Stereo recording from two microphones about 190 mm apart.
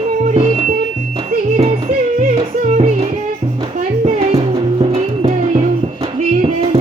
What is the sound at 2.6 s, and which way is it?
Music, 35° right (ahead or behind).